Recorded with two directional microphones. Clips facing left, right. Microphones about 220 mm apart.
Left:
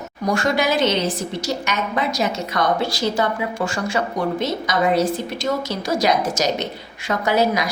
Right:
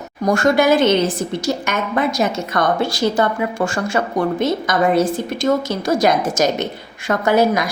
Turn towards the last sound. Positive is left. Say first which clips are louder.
# right 4 dB
turn(degrees=-50)  # may be behind; listen again after turning